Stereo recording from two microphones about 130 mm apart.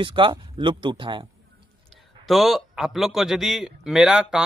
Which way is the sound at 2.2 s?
Centre (ahead or behind).